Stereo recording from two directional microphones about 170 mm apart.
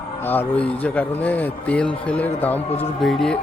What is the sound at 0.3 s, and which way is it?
A man's voice, 10° left (ahead or behind).